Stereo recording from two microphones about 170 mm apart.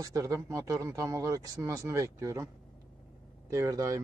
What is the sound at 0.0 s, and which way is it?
Speech, 20° right (ahead or behind).